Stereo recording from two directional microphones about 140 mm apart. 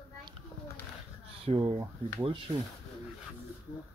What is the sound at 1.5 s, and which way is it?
Speech, 40° right (ahead or behind).